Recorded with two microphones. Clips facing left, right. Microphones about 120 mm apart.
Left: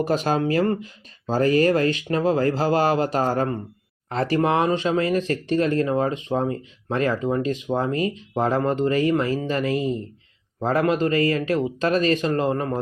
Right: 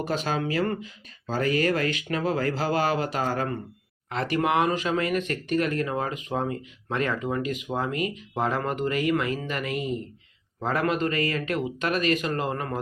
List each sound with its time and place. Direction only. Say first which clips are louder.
0.0 s speech: left 6 dB; 35° left (ahead or behind)